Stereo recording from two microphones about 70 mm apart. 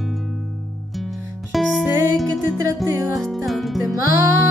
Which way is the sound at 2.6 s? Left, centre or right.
Right.